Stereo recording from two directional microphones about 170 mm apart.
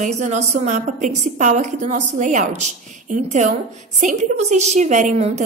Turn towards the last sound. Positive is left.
turn(degrees=-40)  # may be behind; listen again after turning